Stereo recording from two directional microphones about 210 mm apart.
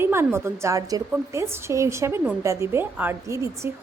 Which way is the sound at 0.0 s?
10° right (ahead or behind).